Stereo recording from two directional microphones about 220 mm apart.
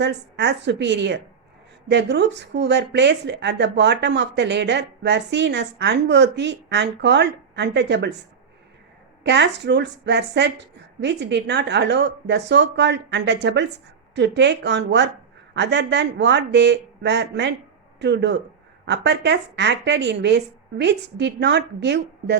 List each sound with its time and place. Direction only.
0.0 s speech: 50° right (ahead or behind)
9.2 s speech: 50° right (ahead or behind)